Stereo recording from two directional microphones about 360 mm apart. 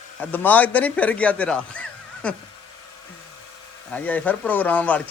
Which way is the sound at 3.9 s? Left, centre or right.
Centre.